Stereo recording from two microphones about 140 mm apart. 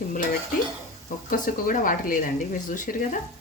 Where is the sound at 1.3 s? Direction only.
75° left (ahead or behind).